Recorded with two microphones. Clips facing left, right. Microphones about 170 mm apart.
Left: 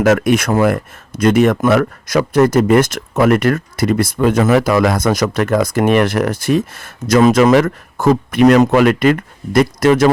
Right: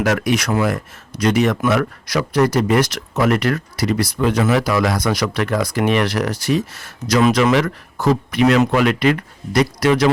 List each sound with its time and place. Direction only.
0.0 s speech: 50° left (ahead or behind)